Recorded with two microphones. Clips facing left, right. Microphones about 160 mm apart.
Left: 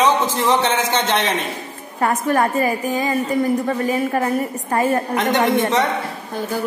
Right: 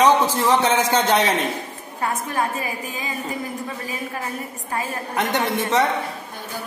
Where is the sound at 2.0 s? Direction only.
70° left (ahead or behind).